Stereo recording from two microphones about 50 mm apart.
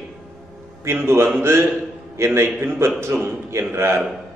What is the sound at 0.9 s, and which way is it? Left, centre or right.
Speech, right.